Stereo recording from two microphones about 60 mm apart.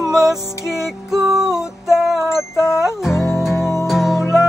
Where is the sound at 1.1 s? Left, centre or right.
Right.